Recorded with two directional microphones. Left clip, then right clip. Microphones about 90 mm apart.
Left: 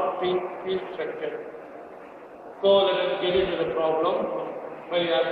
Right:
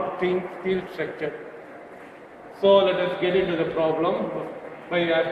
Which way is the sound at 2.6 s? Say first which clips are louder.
Right 2 dB; 25° right (ahead or behind).